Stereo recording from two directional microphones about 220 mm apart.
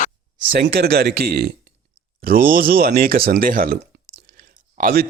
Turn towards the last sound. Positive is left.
turn(degrees=-40)  # may be behind; listen again after turning